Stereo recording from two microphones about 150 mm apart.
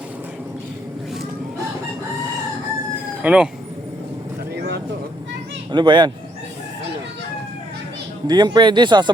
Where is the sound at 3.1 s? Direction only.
10° right (ahead or behind).